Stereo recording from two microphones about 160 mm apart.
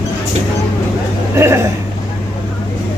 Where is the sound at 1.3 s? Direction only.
15° right (ahead or behind).